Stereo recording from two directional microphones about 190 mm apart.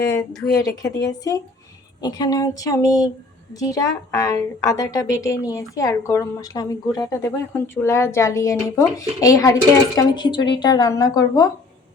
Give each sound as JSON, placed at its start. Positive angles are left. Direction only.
{"t": 0.5, "sound": "a woman's voice", "side_deg": 20}